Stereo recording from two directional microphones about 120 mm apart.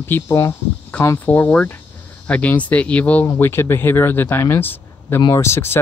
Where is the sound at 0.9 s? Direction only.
10° left (ahead or behind).